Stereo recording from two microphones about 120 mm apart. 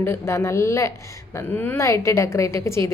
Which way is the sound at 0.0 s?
20° left (ahead or behind).